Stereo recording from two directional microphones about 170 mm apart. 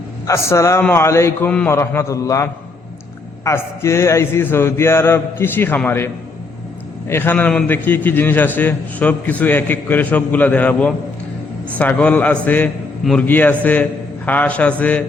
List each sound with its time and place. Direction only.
0.3 s a man's voice: 15° left (ahead or behind)
7.1 s a man's voice: 10° left (ahead or behind)